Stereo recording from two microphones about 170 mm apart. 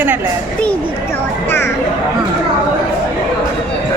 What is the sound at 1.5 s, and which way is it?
Music, 15° left (ahead or behind).